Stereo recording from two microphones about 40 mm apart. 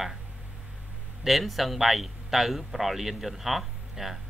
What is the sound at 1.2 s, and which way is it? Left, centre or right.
A man's voice, centre.